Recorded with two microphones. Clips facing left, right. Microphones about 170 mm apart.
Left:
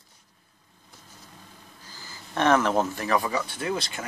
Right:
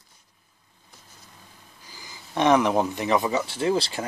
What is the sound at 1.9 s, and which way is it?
Speech, 15° right (ahead or behind).